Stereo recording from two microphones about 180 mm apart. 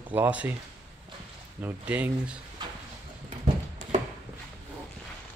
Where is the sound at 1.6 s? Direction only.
5° right (ahead or behind).